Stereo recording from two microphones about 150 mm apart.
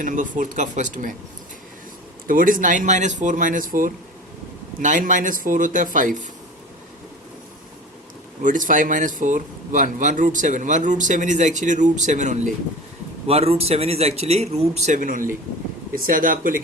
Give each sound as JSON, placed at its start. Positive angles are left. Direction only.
{"t": 0.0, "sound": "speech", "side_deg": -60}
{"t": 2.2, "sound": "speech", "side_deg": -65}
{"t": 8.4, "sound": "speech", "side_deg": -60}
{"t": 13.2, "sound": "a man's voice", "side_deg": -40}